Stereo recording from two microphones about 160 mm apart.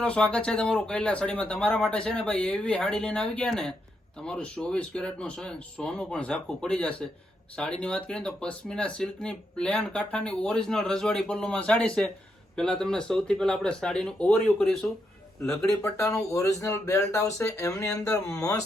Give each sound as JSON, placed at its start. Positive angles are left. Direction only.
{"t": 0.0, "sound": "speech", "side_deg": 5}
{"t": 15.8, "sound": "speech", "side_deg": 15}